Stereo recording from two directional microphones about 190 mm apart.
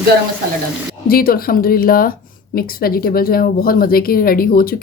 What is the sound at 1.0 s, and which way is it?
Speech, 50° left (ahead or behind).